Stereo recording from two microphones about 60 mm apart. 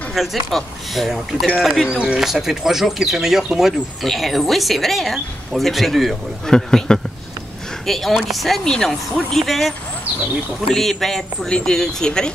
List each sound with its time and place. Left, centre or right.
0.1 s speech: centre
1.9 s speech: centre
6.5 s speech: centre